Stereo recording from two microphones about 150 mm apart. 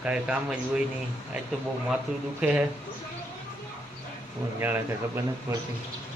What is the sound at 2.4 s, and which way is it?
Speech, 10° right (ahead or behind).